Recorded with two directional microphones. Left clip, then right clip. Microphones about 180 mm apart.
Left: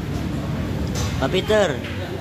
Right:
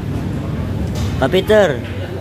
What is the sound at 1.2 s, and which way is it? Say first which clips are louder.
Speech: right 7 dB; 20° right (ahead or behind).